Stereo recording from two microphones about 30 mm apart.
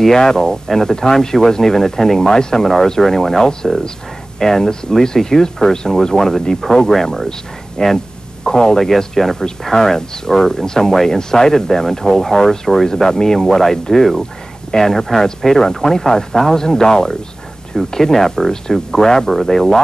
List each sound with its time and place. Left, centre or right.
0.0 s speech: centre
6.1 s speech: centre
7.8 s speech: left; by 12.8 s centre
12.8 s speech: centre